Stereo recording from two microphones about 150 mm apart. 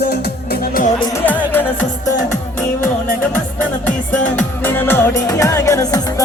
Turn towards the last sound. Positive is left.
turn(degrees=25)  # may be behind; listen again after turning